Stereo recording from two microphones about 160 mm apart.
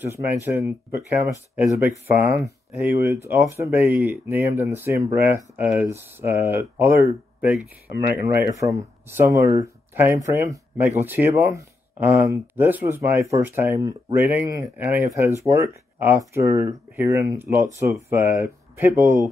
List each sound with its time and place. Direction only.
0.1 s speech: 15° right (ahead or behind)
8.4 s speech: 20° right (ahead or behind)
14.2 s speech: 10° right (ahead or behind)